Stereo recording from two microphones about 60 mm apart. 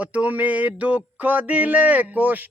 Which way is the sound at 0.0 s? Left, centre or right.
Right.